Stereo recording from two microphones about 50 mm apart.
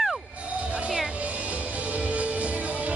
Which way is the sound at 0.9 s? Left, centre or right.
Centre.